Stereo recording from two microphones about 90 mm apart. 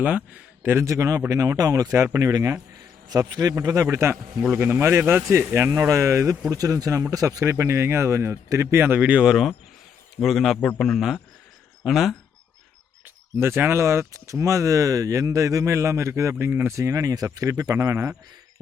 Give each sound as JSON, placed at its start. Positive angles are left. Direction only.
{"t": 0.0, "sound": "speech", "side_deg": -15}
{"t": 3.1, "sound": "a man's voice", "side_deg": -45}
{"t": 3.9, "sound": "speech", "side_deg": -30}
{"t": 6.5, "sound": "a man's voice", "side_deg": -40}
{"t": 13.3, "sound": "speech", "side_deg": -25}
{"t": 16.7, "sound": "speech", "side_deg": -40}